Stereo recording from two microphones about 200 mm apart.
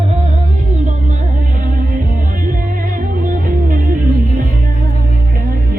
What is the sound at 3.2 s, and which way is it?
Music, 40° right (ahead or behind).